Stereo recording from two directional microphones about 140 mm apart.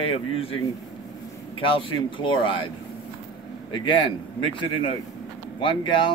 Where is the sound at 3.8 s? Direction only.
35° left (ahead or behind).